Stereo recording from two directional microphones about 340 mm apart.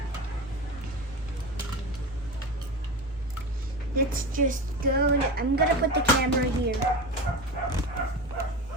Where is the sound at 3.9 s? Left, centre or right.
Right.